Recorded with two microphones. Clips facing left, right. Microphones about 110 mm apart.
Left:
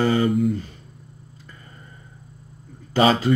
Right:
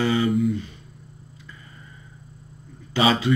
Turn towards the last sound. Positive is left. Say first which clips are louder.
# left 3 dB
turn(degrees=45)  # may be behind; listen again after turning